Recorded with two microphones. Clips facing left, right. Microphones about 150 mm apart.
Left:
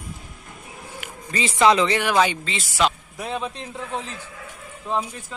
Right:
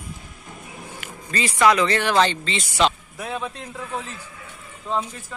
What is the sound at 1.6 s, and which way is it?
Speech, 20° left (ahead or behind).